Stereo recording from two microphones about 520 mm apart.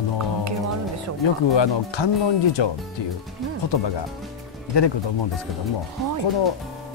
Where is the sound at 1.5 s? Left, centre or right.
Left.